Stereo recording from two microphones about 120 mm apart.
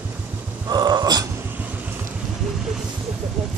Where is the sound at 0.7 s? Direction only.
35° right (ahead or behind).